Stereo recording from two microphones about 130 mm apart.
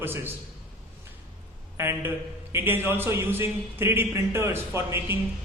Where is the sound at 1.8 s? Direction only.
20° right (ahead or behind).